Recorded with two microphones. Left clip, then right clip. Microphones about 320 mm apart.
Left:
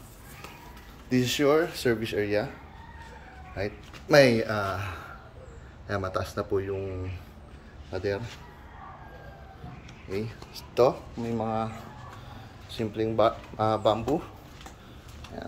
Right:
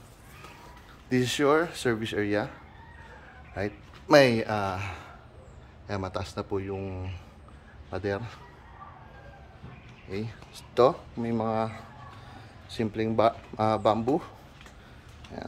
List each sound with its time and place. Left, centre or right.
1.1 s speech: centre
3.5 s speech: centre
7.9 s speech: centre
10.0 s speech: centre